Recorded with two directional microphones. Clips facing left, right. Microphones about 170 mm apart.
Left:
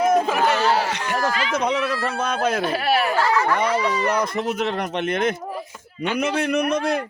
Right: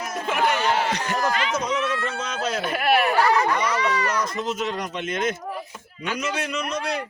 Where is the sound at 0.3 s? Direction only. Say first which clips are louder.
Left 3 dB; 35° left (ahead or behind).